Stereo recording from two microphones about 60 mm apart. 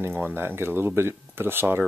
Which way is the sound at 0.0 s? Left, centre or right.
Right.